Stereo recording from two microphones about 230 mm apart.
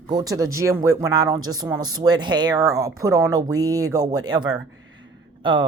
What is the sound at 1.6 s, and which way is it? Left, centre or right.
Speech, centre.